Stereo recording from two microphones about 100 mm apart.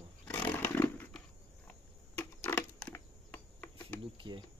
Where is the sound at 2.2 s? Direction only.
20° left (ahead or behind).